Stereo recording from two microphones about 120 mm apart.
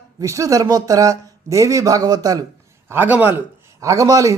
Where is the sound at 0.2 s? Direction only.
25° right (ahead or behind).